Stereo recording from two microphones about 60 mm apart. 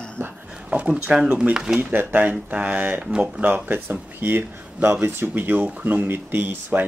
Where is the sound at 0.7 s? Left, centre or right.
Centre.